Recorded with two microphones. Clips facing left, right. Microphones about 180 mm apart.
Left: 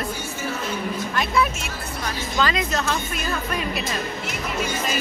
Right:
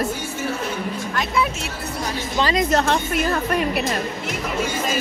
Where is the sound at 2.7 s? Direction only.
60° right (ahead or behind).